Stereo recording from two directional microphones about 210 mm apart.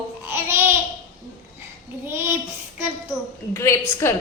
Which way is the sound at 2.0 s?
10° right (ahead or behind).